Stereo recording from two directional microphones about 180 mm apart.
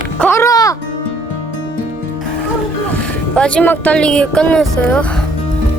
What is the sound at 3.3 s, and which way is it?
Speech, 5° left (ahead or behind).